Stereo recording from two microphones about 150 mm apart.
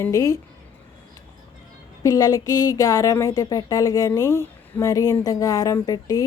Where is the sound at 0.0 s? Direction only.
20° left (ahead or behind).